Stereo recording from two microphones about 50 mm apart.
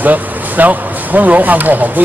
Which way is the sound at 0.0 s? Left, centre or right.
Right.